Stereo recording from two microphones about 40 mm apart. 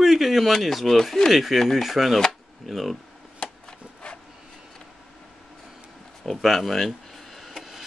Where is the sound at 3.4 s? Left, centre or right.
Left.